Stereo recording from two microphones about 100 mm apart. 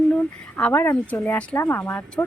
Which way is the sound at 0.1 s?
15° left (ahead or behind).